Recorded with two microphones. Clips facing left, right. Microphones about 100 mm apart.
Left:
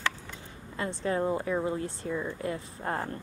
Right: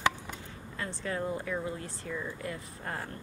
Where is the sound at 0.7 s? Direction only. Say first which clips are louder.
Left 6 dB; 25° left (ahead or behind).